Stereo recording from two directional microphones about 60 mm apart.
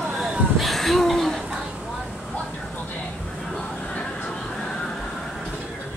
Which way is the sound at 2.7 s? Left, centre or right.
Left.